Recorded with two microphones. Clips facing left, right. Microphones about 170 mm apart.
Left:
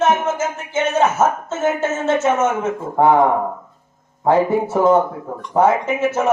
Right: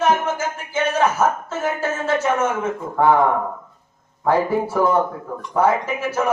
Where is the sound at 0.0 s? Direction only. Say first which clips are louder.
Left 2 dB; 25° left (ahead or behind).